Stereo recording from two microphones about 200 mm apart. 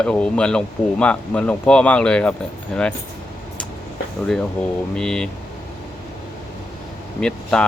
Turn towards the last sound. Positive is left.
turn(degrees=5)  # may be behind; listen again after turning